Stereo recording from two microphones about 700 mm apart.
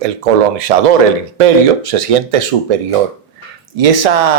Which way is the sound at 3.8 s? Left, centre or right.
Right.